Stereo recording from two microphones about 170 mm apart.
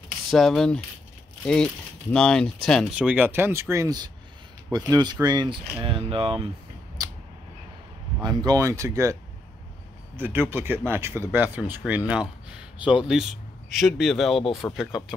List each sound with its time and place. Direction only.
0.3 s speech: centre (ahead or behind); by 6.4 s 30° right (ahead or behind)
8.2 s speech: 25° right (ahead or behind); by 12.0 s 10° right (ahead or behind)
12.1 s a sound: 5° right (ahead or behind)
12.8 s speech: 5° right (ahead or behind)